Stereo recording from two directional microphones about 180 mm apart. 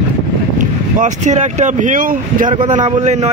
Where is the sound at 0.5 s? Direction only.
40° right (ahead or behind).